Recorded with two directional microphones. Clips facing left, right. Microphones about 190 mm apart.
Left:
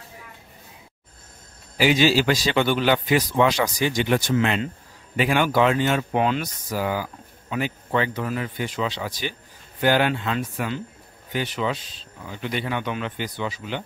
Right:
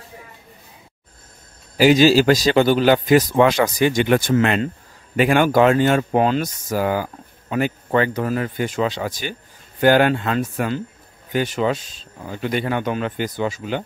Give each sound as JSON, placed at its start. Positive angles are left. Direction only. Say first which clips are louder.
{"t": 1.8, "sound": "speech", "louder": "right 6 dB", "side_deg": -40}